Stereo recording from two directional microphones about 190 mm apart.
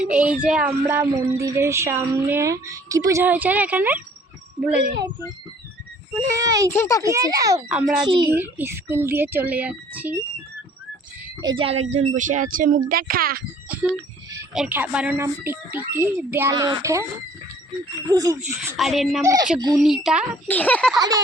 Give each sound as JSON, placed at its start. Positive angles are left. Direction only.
{"t": 0.0, "sound": "speech", "side_deg": -5}
{"t": 6.3, "sound": "speech", "side_deg": -20}
{"t": 6.7, "sound": "speech", "side_deg": 15}
{"t": 7.0, "sound": "speech", "side_deg": -15}
{"t": 7.7, "sound": "a woman's voice", "side_deg": -5}
{"t": 11.3, "sound": "speech", "side_deg": -25}
{"t": 13.7, "sound": "a sound", "side_deg": -10}
{"t": 14.5, "sound": "speech", "side_deg": -5}
{"t": 18.1, "sound": "speech", "side_deg": -20}
{"t": 18.4, "sound": "a woman's voice", "side_deg": 0}
{"t": 19.2, "sound": "speech", "side_deg": -15}
{"t": 19.7, "sound": "a woman's voice", "side_deg": 0}
{"t": 20.5, "sound": "speech", "side_deg": 10}